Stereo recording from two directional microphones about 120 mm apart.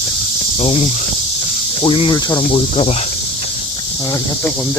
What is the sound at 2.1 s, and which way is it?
Cricket, 30° left (ahead or behind).